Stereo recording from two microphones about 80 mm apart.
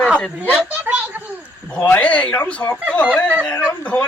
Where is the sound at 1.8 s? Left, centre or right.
Centre.